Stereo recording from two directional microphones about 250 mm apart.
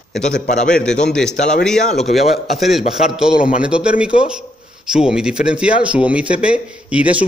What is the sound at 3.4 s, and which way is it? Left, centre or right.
Speech, left.